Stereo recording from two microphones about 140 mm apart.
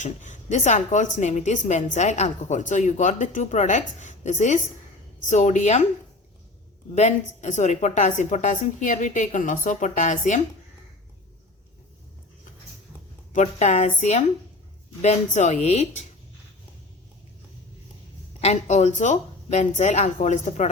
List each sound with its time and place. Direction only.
0.0 s a woman's voice: 60° left (ahead or behind)
6.9 s a woman's voice: 55° left (ahead or behind)
13.3 s a woman's voice: 55° left (ahead or behind)
18.3 s a woman's voice: 50° left (ahead or behind)